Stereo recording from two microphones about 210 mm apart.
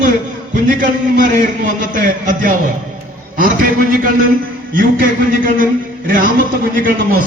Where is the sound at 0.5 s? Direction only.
40° right (ahead or behind).